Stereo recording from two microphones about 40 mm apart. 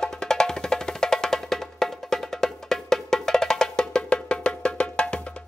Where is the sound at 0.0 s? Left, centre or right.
Centre.